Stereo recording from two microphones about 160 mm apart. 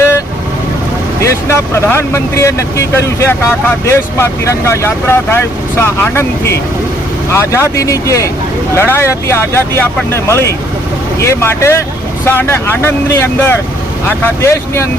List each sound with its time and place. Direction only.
1.2 s speech: 15° left (ahead or behind)